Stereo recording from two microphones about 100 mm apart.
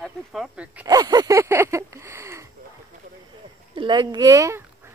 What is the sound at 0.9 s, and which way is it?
A woman's voice, 40° right (ahead or behind).